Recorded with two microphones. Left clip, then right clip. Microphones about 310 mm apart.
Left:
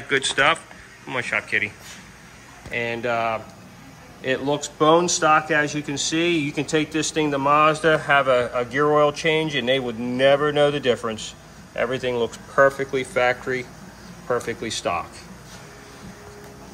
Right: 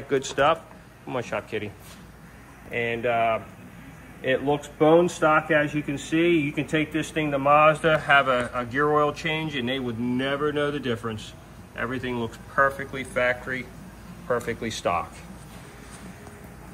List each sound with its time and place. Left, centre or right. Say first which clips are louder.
0.1 s speech: left 3 dB; centre
2.7 s speech: left 1 dB; centre
6.3 s speech: even; left
6.8 s a man's voice: left 4 dB; centre